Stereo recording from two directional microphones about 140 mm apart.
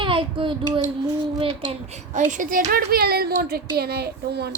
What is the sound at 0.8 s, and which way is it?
Child singing, 30° right (ahead or behind).